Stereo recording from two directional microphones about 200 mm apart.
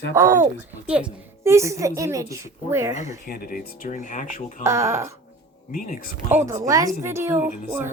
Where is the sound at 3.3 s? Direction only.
50° left (ahead or behind).